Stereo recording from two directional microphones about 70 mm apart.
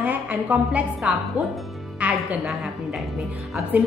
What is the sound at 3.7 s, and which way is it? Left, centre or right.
Speech, right.